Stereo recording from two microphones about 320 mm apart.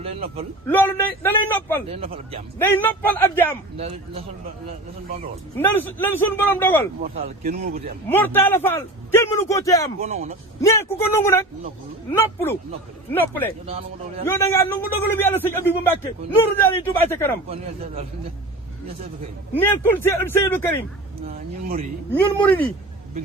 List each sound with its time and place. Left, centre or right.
0.0 s a man's voice: centre
0.7 s a man's voice: centre
1.9 s speech: centre
2.6 s a man's voice: centre
3.8 s speech: centre
5.5 s a man's voice: centre
7.0 s speech: right
8.0 s a man's voice: centre
10.0 s speech: right
10.6 s a man's voice: centre
13.7 s speech: centre
14.3 s a man's voice: centre
19.5 s a man's voice: centre
22.1 s speech: centre